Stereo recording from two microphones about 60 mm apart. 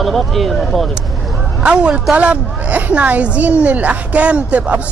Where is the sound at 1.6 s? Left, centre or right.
Centre.